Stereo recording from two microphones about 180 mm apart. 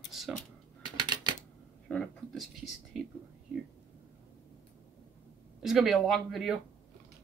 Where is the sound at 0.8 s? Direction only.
25° right (ahead or behind).